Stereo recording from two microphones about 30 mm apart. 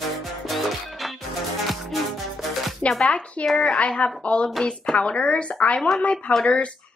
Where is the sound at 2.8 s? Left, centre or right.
Left.